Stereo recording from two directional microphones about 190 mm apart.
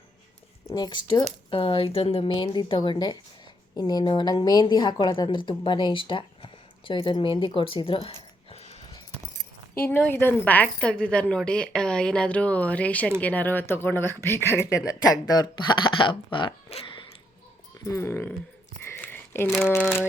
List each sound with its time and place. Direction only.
0.7 s a woman's voice: 25° left (ahead or behind)
9.7 s speech: 10° left (ahead or behind); by 17.0 s 30° left (ahead or behind)
17.8 s speech: 15° left (ahead or behind)
18.8 s a sound: 10° left (ahead or behind)